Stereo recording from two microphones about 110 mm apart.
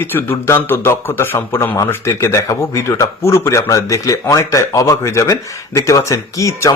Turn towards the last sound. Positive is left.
turn(degrees=30)  # may be behind; listen again after turning